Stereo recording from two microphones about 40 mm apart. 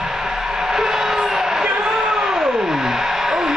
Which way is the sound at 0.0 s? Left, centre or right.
Centre.